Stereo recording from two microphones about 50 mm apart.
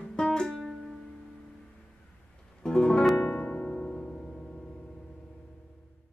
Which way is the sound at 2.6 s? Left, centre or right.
Centre.